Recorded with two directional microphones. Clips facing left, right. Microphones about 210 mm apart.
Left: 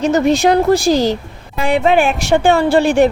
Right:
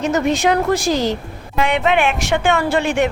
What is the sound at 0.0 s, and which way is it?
A woman's voice, 35° left (ahead or behind).